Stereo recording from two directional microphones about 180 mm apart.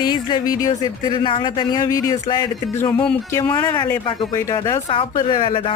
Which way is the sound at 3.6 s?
15° left (ahead or behind).